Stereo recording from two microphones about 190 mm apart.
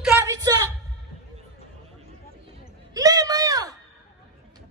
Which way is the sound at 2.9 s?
20° right (ahead or behind).